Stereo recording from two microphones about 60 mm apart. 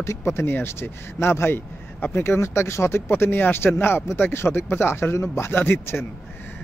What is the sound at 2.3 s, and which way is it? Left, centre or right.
Speech, left.